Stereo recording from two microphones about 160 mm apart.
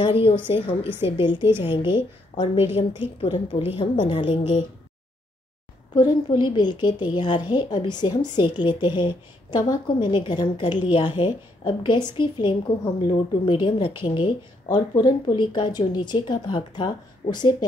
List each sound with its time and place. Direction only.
0.0 s a woman's voice: 35° left (ahead or behind)
5.9 s a woman's voice: 30° left (ahead or behind)